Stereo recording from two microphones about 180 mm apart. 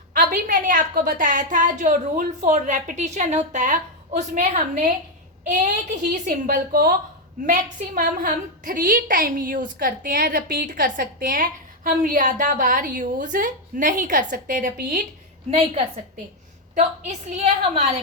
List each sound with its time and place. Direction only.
0.1 s a woman's voice: 50° right (ahead or behind)
15.4 s a woman's voice: 35° right (ahead or behind)